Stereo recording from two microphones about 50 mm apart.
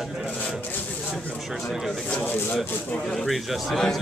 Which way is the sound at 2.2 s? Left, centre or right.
Left.